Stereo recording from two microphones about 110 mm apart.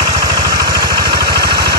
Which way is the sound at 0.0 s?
40° right (ahead or behind).